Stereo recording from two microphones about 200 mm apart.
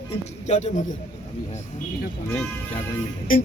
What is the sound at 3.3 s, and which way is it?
Speech, 45° left (ahead or behind).